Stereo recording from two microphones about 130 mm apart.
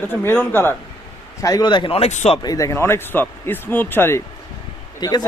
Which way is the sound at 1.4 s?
25° left (ahead or behind).